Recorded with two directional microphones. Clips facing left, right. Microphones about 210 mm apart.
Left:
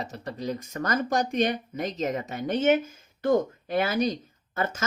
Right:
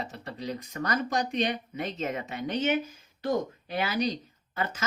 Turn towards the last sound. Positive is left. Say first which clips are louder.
# left 3 dB
turn(degrees=45)  # may be behind; listen again after turning